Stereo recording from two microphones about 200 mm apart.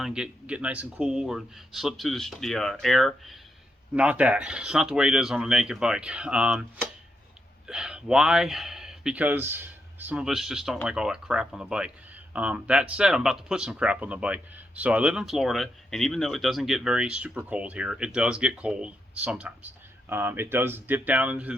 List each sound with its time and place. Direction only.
0.0 s speech: 5° right (ahead or behind)
7.7 s speech: 5° right (ahead or behind)